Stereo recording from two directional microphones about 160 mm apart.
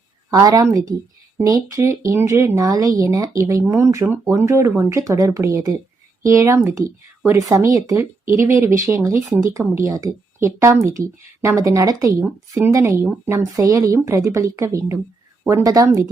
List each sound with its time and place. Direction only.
0.3 s speech: 20° right (ahead or behind)